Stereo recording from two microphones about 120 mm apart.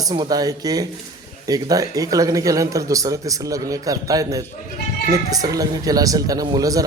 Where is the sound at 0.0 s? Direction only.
35° right (ahead or behind).